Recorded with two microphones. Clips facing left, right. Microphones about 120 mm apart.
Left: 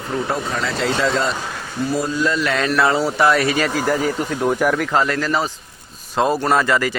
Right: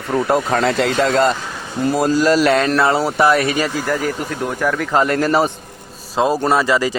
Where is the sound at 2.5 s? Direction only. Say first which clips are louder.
Right 5 dB; 40° right (ahead or behind).